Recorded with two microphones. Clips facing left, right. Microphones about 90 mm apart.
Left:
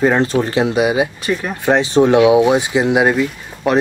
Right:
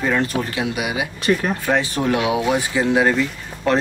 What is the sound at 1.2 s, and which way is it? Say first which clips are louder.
Speech: right 1 dB; centre (ahead or behind).